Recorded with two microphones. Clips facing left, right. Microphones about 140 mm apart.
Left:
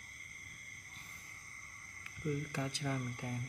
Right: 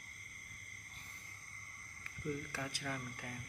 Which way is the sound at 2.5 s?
20° left (ahead or behind).